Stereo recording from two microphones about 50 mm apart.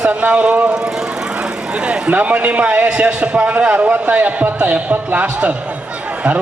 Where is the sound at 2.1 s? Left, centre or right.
Right.